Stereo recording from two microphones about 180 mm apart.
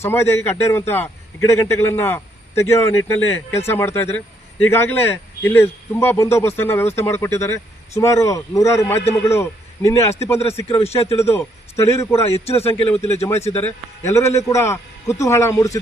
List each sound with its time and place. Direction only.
0.0 s speech: 15° left (ahead or behind)
10.8 s speech: 30° left (ahead or behind)
11.2 s speech: 15° left (ahead or behind)